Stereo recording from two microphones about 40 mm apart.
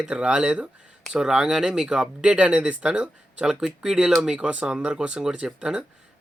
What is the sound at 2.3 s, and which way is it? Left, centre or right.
Speech, right.